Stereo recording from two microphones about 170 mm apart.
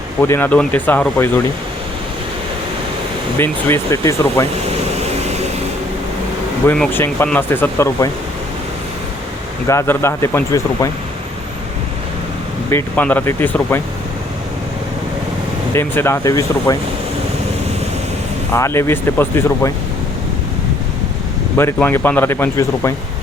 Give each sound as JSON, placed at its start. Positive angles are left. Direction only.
{"t": 0.2, "sound": "speech", "side_deg": 15}
{"t": 3.3, "sound": "speech", "side_deg": 15}
{"t": 6.7, "sound": "speech", "side_deg": 10}
{"t": 9.6, "sound": "speech", "side_deg": 15}
{"t": 12.7, "sound": "speech", "side_deg": 10}
{"t": 15.7, "sound": "speech", "side_deg": 15}
{"t": 18.5, "sound": "speech", "side_deg": 15}
{"t": 21.6, "sound": "speech", "side_deg": 15}